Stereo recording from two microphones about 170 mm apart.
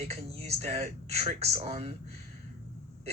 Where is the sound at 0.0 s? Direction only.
40° right (ahead or behind).